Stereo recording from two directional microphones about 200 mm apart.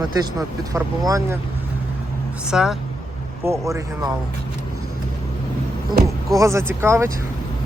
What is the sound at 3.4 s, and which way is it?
Speech, 15° right (ahead or behind).